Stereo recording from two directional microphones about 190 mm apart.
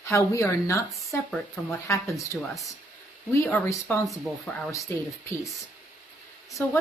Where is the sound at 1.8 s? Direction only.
15° left (ahead or behind).